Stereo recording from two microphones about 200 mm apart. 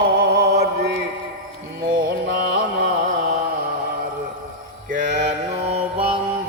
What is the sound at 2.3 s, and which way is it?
Mantra, 60° right (ahead or behind).